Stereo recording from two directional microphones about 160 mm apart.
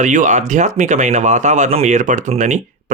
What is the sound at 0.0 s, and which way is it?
Speech, 50° right (ahead or behind).